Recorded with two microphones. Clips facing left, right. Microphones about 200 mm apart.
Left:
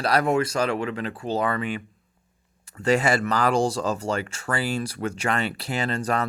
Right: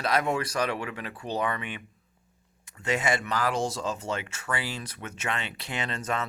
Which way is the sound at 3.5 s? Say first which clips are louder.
Left 6 dB; 35° left (ahead or behind).